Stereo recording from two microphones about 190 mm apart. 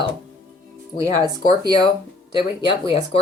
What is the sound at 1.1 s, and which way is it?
Speech, 20° right (ahead or behind).